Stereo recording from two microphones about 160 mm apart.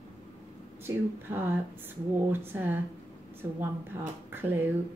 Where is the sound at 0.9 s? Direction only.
15° right (ahead or behind).